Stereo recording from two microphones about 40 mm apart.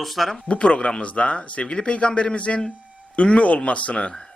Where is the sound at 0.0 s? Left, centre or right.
Centre.